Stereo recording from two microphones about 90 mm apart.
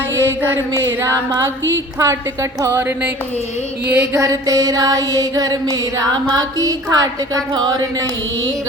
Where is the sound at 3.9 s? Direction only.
30° right (ahead or behind); by 7.8 s 50° right (ahead or behind).